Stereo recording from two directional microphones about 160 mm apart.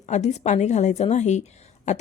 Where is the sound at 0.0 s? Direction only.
45° left (ahead or behind).